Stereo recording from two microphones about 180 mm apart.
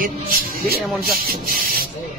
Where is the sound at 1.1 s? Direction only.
55° right (ahead or behind).